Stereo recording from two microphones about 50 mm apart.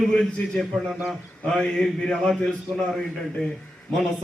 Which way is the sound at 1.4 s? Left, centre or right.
Centre.